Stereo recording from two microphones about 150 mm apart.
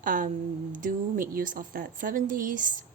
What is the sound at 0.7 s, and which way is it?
A woman's voice, 65° right (ahead or behind).